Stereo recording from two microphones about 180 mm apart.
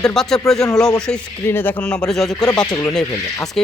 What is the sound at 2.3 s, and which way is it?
Speech, 15° left (ahead or behind).